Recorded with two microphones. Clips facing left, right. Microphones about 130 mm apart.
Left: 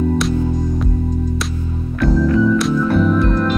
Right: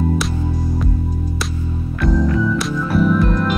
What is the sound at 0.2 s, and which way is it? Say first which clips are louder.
Music: left 5 dB; centre (ahead or behind).